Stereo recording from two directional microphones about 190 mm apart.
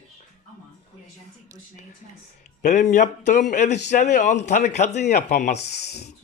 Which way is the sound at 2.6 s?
40° left (ahead or behind).